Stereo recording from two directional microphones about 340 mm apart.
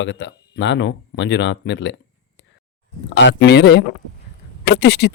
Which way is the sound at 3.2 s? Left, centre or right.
Left.